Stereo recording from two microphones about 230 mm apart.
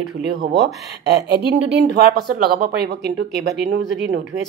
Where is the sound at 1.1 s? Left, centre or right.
Right.